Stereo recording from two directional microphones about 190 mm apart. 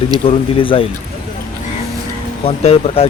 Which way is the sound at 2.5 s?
30° left (ahead or behind).